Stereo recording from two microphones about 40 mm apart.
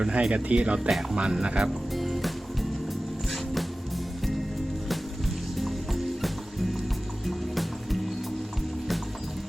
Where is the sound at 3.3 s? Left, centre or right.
Centre.